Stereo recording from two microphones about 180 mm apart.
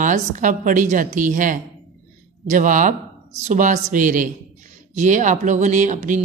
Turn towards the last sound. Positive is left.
turn(degrees=-45)  # may be behind; listen again after turning